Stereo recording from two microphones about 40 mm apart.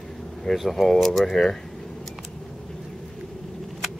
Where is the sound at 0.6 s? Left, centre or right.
Centre.